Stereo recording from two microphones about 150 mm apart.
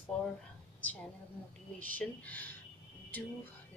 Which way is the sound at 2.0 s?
10° left (ahead or behind).